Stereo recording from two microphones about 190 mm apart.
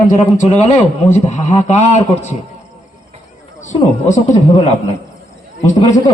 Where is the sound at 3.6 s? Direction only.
40° left (ahead or behind).